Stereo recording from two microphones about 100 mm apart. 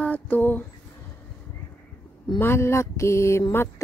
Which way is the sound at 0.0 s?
15° left (ahead or behind).